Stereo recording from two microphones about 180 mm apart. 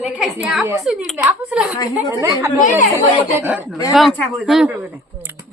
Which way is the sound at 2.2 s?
15° right (ahead or behind).